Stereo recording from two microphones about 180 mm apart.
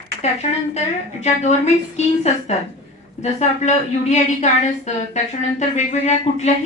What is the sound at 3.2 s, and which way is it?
A woman's voice, 40° left (ahead or behind).